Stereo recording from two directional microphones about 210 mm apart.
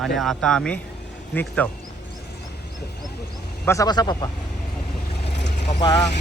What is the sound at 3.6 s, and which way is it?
Speech, 15° left (ahead or behind).